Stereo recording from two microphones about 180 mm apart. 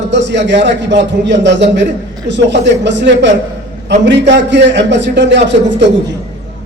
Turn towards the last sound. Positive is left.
turn(degrees=-75)  # may be behind; listen again after turning